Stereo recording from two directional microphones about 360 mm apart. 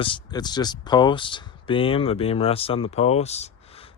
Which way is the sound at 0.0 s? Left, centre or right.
Centre.